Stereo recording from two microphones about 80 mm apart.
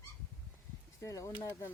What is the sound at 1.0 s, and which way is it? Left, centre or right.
Speech, left.